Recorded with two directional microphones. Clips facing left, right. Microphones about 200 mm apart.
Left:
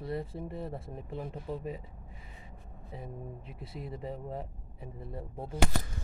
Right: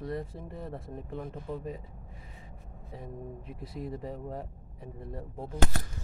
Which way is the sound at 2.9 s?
5° left (ahead or behind).